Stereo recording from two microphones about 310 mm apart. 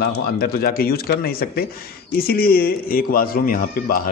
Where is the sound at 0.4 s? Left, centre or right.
Left.